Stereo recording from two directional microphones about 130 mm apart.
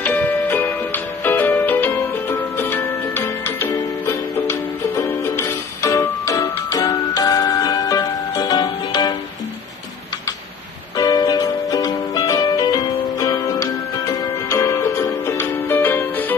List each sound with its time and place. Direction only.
0.0 s music: 15° left (ahead or behind); by 9.1 s 30° left (ahead or behind)
11.0 s music: 30° left (ahead or behind)